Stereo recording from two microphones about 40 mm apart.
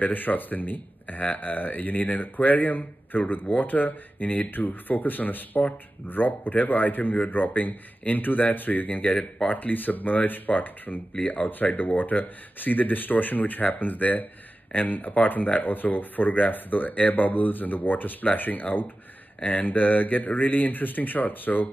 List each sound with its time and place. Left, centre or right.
0.0 s speech: left